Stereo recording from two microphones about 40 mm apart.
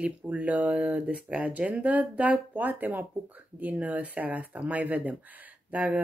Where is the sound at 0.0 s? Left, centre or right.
Right.